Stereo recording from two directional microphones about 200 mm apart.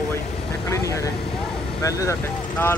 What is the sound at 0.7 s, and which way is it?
Vehicle, 15° left (ahead or behind).